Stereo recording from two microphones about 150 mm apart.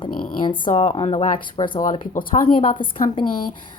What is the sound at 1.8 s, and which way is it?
Speech, 60° left (ahead or behind).